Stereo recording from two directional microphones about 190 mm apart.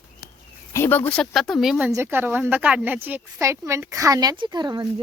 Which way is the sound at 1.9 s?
10° right (ahead or behind).